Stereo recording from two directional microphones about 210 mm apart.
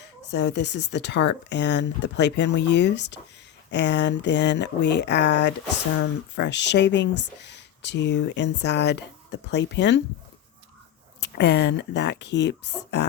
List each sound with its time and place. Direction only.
0.0 s speech: 55° left (ahead or behind)
11.2 s speech: 55° left (ahead or behind)